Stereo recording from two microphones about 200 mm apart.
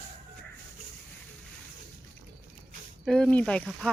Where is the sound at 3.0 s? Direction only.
Centre (ahead or behind).